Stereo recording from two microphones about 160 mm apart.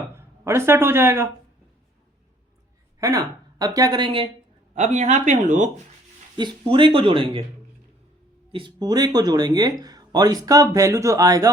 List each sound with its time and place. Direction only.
0.2 s speech: 15° right (ahead or behind)
3.0 s speech: 20° right (ahead or behind)
4.7 s speech: 45° right (ahead or behind)
6.3 s speech: 30° right (ahead or behind)
8.5 s speech: 25° right (ahead or behind)